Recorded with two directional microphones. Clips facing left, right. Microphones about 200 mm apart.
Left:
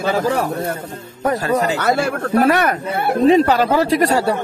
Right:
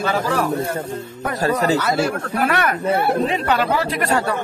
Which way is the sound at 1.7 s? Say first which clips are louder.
Left 1 dB; 60° left (ahead or behind).